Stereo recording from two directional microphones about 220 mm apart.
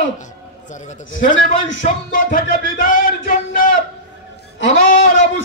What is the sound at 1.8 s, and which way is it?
Music, 40° left (ahead or behind).